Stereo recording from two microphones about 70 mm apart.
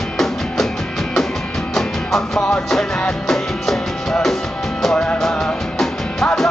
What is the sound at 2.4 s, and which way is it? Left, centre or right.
Music, centre.